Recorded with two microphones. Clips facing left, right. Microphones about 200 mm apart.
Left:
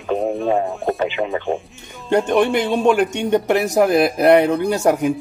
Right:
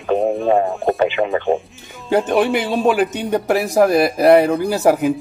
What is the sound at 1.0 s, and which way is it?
Speech, 65° right (ahead or behind).